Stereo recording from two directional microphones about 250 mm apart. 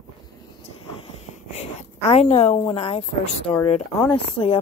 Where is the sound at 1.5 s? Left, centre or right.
Left.